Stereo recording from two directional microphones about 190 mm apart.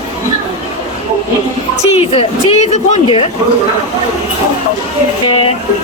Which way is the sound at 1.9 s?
35° left (ahead or behind).